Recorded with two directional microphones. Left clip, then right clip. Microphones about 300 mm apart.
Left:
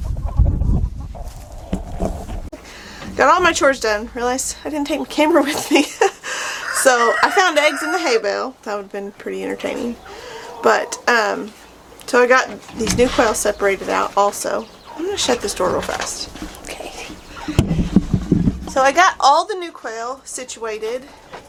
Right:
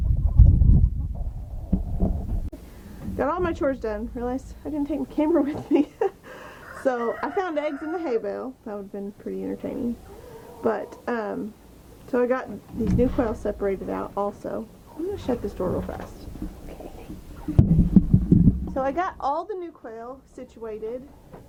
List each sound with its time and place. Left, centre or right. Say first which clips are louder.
1.7 s horse: left 6 dB; centre
3.0 s a woman's voice: left 12 dB; centre
17.0 s a sound: left 11 dB; centre
18.6 s a woman's voice: left 12 dB; centre